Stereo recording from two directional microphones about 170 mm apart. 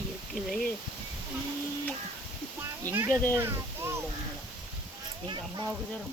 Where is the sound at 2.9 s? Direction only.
15° right (ahead or behind).